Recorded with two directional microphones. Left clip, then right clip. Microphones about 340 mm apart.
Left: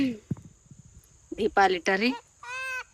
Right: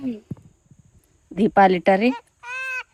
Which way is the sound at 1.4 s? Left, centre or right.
Centre.